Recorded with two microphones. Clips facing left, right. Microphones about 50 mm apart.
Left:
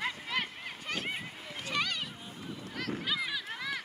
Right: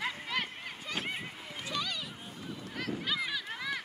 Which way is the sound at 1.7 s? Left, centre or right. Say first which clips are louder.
Left 3 dB; left.